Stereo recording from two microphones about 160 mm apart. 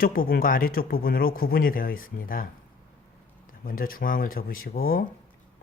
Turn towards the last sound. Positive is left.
turn(degrees=65)  # may be behind; listen again after turning